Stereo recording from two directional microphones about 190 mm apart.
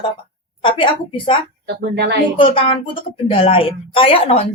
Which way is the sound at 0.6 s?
25° left (ahead or behind).